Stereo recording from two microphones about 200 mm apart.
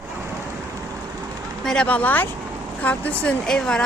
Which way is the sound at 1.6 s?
5° left (ahead or behind).